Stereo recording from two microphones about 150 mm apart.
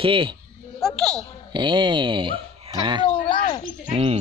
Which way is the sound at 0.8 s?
5° left (ahead or behind).